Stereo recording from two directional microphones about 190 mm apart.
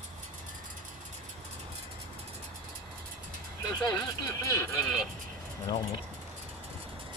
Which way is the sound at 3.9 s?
20° left (ahead or behind).